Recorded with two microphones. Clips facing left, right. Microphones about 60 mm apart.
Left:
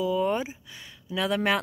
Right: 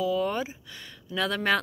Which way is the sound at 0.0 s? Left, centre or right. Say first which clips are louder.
Left 1 dB; left.